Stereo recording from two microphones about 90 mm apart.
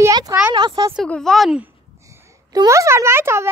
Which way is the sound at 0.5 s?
55° right (ahead or behind).